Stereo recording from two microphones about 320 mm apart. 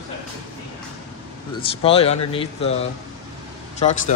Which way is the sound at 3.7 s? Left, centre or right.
Left.